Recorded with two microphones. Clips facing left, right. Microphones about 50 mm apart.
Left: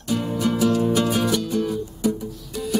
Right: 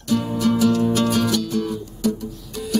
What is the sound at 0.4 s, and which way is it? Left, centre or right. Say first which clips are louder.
Music: right 2 dB; centre.